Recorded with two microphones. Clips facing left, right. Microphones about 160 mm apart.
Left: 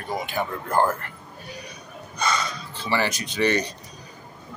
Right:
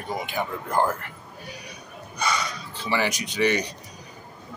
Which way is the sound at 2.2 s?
15° right (ahead or behind).